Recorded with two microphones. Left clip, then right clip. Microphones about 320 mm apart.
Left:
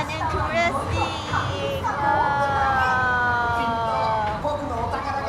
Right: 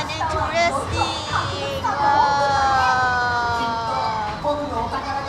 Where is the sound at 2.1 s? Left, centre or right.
Centre.